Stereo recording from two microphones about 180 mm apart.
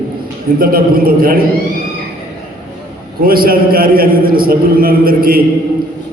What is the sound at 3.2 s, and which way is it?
A man's voice, 55° right (ahead or behind).